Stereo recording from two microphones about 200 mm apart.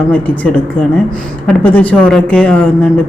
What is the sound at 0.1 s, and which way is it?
A woman's voice, 10° left (ahead or behind).